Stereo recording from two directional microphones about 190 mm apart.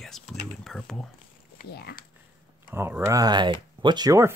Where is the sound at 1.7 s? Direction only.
55° left (ahead or behind).